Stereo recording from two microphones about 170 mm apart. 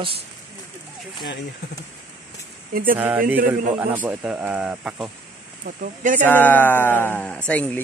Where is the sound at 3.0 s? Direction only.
10° right (ahead or behind).